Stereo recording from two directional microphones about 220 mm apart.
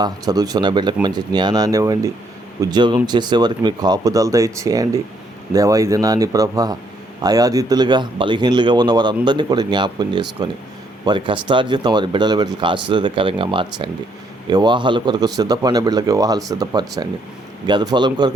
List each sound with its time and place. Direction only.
0.0 s a man's voice: 15° right (ahead or behind)